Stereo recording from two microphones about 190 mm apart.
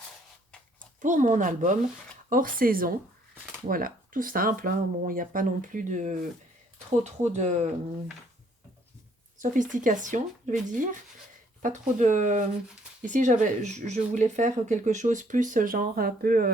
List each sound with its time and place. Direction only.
1.0 s speech: 40° right (ahead or behind)
9.4 s speech: 40° right (ahead or behind)